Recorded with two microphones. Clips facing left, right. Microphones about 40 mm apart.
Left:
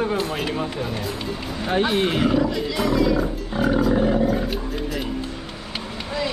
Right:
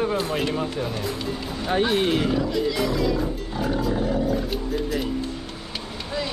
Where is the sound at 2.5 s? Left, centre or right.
Centre.